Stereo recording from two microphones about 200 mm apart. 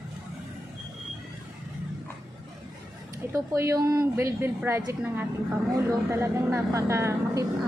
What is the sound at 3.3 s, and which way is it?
A woman's voice, 15° right (ahead or behind).